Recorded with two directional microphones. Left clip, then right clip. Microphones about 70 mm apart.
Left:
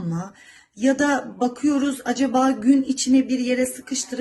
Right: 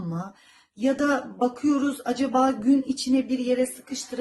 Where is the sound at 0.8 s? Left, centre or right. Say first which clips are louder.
Left 3 dB; right.